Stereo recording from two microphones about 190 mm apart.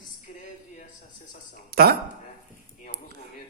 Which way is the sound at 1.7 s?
55° right (ahead or behind).